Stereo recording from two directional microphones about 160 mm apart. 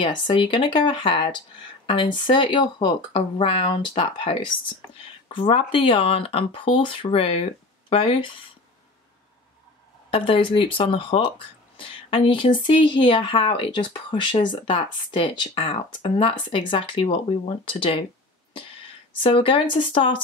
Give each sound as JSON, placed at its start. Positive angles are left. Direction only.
{"t": 0.0, "sound": "speech", "side_deg": 30}
{"t": 10.1, "sound": "speech", "side_deg": 35}
{"t": 19.2, "sound": "speech", "side_deg": 35}